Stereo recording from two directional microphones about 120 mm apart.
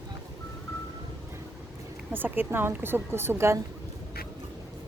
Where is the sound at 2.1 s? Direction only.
15° right (ahead or behind).